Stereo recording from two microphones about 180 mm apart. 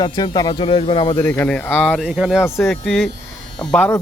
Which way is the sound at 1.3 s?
10° left (ahead or behind).